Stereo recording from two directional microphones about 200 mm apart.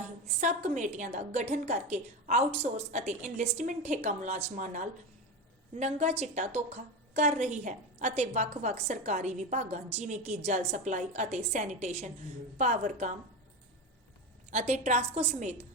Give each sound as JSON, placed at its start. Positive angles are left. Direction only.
{"t": 0.3, "sound": "a woman's voice", "side_deg": -35}
{"t": 14.5, "sound": "a woman's voice", "side_deg": -35}